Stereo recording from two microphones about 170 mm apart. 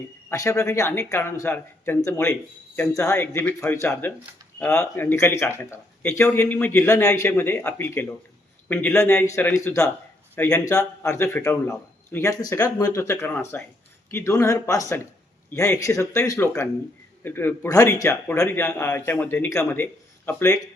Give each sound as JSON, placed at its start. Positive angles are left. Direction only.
{"t": 0.3, "sound": "a man's voice", "side_deg": 15}